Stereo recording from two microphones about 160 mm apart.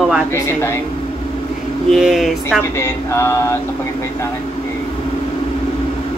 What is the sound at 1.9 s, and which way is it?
Speech, centre (ahead or behind).